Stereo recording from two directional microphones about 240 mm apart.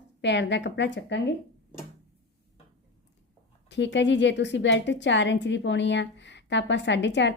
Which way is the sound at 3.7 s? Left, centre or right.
Left.